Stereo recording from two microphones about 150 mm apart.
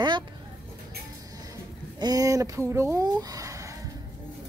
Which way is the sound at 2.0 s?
25° right (ahead or behind).